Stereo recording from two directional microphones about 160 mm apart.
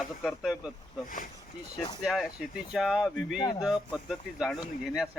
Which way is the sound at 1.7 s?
25° left (ahead or behind).